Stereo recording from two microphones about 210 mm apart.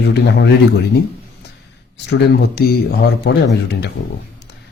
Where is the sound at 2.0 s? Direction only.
50° left (ahead or behind).